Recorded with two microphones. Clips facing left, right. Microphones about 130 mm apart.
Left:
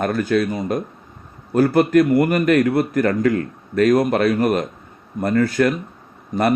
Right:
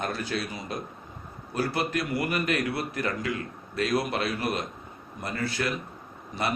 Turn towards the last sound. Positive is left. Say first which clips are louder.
# left 11 dB
turn(degrees=45)  # may be behind; listen again after turning